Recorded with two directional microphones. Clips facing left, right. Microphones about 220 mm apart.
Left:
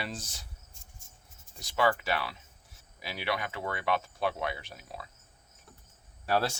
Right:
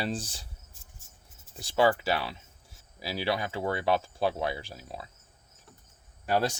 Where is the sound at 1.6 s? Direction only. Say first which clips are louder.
Right 4 dB; 30° right (ahead or behind).